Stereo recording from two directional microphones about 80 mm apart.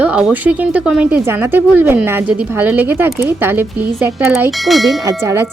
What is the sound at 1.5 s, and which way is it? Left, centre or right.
A woman's voice, right.